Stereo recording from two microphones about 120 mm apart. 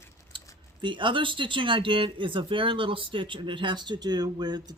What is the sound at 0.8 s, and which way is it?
Speech, 40° right (ahead or behind).